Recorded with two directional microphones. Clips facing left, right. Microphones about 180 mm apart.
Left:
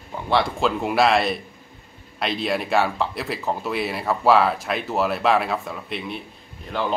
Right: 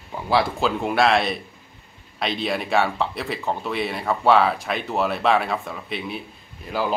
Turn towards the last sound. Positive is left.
turn(degrees=-5)  # may be behind; listen again after turning